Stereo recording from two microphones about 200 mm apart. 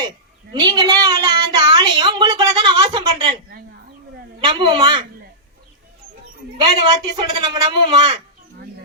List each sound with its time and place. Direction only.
0.6 s a sound: 20° right (ahead or behind)
4.4 s speech: 25° right (ahead or behind)
6.6 s speech: 25° right (ahead or behind)